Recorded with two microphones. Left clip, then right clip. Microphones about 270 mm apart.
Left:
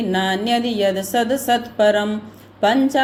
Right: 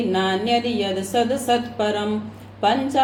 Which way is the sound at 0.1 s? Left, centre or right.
Left.